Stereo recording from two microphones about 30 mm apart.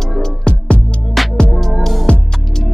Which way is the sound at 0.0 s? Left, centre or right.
Centre.